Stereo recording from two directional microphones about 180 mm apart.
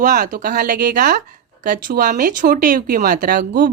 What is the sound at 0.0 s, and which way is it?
A woman's voice, 45° right (ahead or behind).